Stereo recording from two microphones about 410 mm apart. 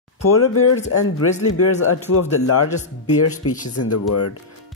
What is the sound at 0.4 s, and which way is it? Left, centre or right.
Speech, left.